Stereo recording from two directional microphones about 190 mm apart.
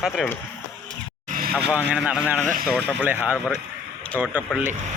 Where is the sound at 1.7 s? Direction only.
5° right (ahead or behind).